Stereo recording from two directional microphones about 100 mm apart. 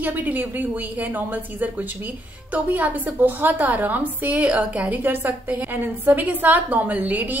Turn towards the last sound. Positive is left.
turn(degrees=-15)  # may be behind; listen again after turning